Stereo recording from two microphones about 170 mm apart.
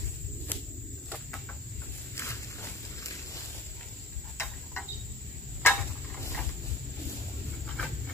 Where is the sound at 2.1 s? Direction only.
15° left (ahead or behind).